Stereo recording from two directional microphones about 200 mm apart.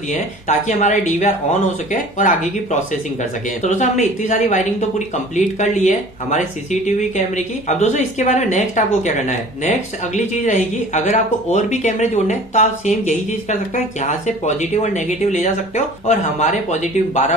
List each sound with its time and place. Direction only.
0.1 s speech: 35° left (ahead or behind)